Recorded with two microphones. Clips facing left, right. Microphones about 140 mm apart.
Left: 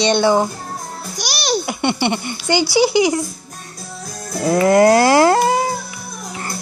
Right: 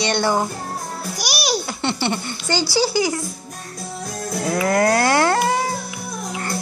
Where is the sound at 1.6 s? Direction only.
15° left (ahead or behind).